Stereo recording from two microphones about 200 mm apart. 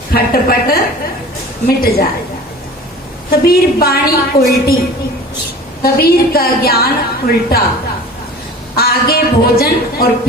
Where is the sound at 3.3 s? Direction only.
50° left (ahead or behind).